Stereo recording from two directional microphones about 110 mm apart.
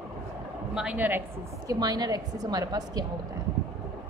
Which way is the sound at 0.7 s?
10° right (ahead or behind).